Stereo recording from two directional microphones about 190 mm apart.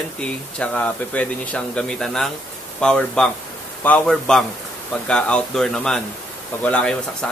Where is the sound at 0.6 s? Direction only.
5° left (ahead or behind).